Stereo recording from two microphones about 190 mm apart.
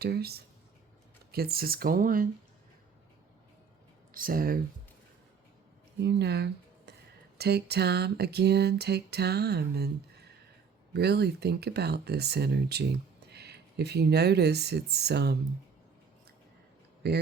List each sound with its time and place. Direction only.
0.0 s speech: 55° right (ahead or behind)
4.1 s speech: 50° right (ahead or behind)
6.0 s speech: 60° right (ahead or behind)
10.9 s speech: 60° right (ahead or behind)
17.0 s speech: 60° right (ahead or behind)